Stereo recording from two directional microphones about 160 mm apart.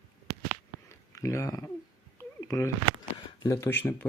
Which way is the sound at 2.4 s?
20° left (ahead or behind).